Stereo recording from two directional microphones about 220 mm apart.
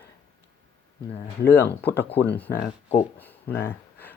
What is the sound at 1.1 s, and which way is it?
Speech, 10° left (ahead or behind).